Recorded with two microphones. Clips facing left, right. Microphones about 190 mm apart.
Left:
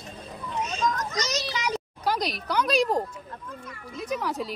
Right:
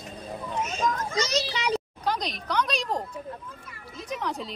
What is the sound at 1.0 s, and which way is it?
Children playing, 30° right (ahead or behind).